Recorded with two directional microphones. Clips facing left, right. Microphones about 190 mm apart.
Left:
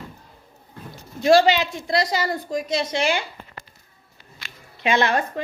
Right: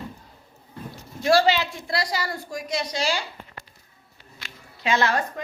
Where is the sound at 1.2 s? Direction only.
20° left (ahead or behind).